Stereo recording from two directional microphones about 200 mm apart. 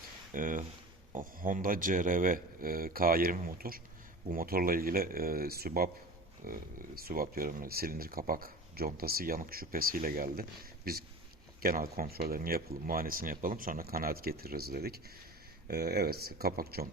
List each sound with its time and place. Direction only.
0.3 s speech: 40° right (ahead or behind)